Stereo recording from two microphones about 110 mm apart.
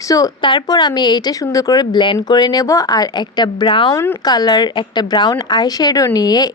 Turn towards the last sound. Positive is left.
turn(degrees=35)  # may be behind; listen again after turning